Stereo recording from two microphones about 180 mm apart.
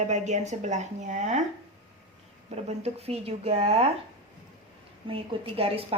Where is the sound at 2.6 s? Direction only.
35° right (ahead or behind).